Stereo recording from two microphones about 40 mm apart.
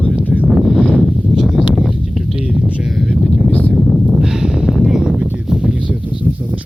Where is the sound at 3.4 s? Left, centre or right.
Left.